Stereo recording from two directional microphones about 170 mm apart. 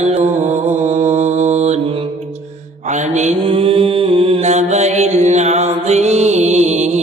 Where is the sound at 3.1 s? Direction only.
45° right (ahead or behind).